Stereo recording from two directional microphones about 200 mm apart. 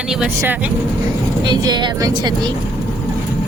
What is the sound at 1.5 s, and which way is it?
Speech, 20° right (ahead or behind).